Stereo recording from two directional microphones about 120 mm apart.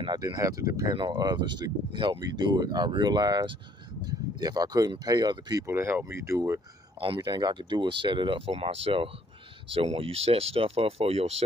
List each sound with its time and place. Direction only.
0.0 s speech: 35° right (ahead or behind)
5.7 s speech: 20° right (ahead or behind)
7.2 s speech: 35° right (ahead or behind); by 11.4 s 60° right (ahead or behind)